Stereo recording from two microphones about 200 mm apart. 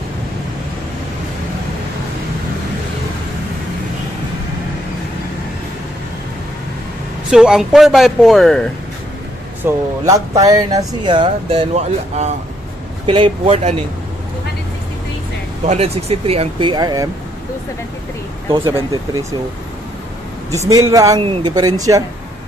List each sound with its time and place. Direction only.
7.2 s speech: centre (ahead or behind)
9.7 s speech: 15° right (ahead or behind); by 13.7 s 35° right (ahead or behind)
15.6 s speech: 30° right (ahead or behind)
18.5 s speech: 25° right (ahead or behind)
20.5 s speech: 15° right (ahead or behind)